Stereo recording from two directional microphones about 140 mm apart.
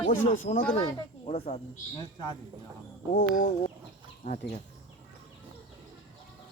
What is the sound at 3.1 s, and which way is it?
Speech, 60° left (ahead or behind).